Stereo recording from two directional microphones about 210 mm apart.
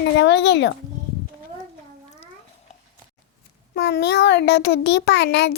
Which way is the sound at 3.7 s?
55° left (ahead or behind).